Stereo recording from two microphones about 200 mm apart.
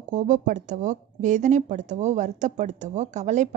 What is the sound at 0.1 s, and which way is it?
A woman's voice, 40° right (ahead or behind).